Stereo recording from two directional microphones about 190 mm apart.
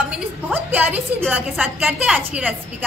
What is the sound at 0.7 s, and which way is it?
A woman's voice, 10° right (ahead or behind).